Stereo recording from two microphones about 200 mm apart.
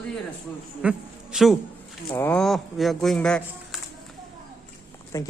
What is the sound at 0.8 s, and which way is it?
Speech, 5° right (ahead or behind).